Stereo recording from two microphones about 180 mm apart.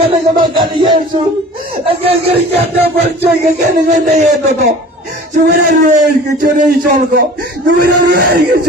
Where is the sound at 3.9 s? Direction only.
40° right (ahead or behind).